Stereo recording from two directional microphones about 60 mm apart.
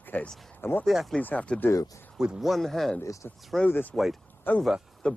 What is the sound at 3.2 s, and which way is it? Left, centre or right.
Speech, left.